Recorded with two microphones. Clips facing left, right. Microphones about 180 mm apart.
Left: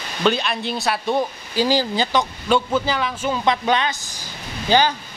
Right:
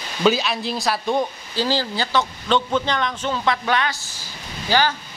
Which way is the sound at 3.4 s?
20° left (ahead or behind).